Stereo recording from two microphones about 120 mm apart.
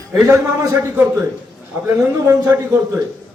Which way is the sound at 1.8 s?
20° right (ahead or behind).